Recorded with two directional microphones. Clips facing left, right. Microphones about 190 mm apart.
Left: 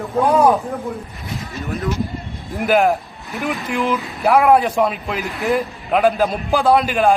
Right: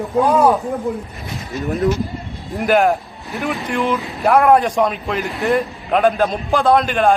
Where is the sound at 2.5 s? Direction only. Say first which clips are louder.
Right 1 dB; centre (ahead or behind).